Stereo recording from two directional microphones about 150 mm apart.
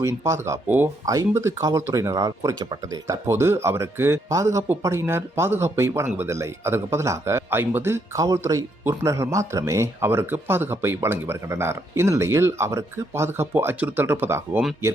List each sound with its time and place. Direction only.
0.0 s speech: 20° right (ahead or behind)